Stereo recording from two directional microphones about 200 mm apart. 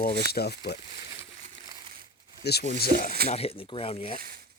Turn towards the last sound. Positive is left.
turn(degrees=30)  # may be behind; listen again after turning